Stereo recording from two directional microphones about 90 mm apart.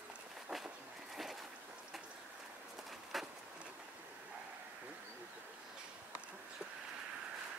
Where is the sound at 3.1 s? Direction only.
Centre (ahead or behind).